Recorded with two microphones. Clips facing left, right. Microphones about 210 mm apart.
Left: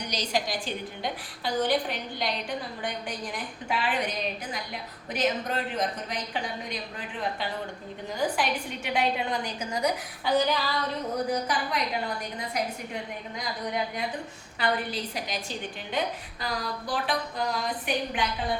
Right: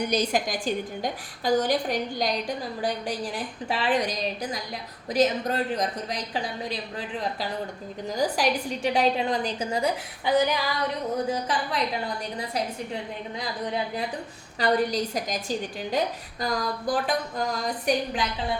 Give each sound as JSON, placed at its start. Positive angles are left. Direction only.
{"t": 0.0, "sound": "a woman's voice", "side_deg": -55}
{"t": 8.1, "sound": "a woman's voice", "side_deg": -40}
{"t": 11.3, "sound": "a woman's voice", "side_deg": -30}
{"t": 14.6, "sound": "a woman's voice", "side_deg": -40}